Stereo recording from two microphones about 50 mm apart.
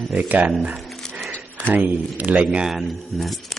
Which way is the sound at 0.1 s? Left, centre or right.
Right.